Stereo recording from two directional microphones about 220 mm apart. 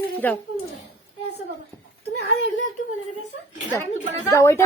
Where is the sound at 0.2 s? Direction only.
5° left (ahead or behind).